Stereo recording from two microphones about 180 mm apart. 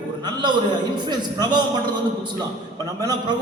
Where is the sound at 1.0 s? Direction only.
25° right (ahead or behind).